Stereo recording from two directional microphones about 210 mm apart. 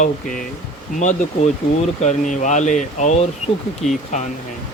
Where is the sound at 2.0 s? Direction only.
35° left (ahead or behind).